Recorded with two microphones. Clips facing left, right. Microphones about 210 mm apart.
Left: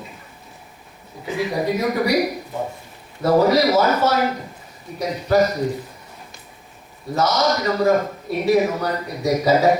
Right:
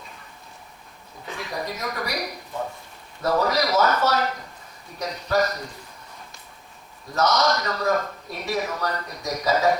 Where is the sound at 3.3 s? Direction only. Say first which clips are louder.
Left 7 dB; 30° left (ahead or behind).